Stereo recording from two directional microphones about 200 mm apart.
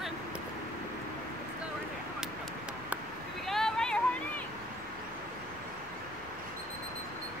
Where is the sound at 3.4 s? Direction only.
Centre (ahead or behind).